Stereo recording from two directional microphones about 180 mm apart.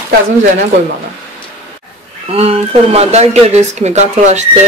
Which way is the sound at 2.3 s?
35° right (ahead or behind).